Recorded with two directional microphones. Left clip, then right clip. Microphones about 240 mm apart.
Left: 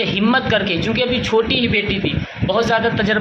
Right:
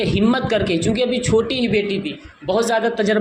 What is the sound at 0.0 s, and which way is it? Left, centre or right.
A woman's voice, right.